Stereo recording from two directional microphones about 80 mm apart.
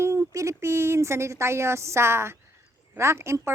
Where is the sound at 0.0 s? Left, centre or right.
Right.